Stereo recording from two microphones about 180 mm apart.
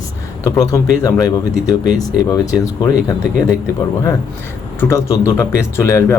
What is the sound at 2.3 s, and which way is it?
Speech, 20° left (ahead or behind).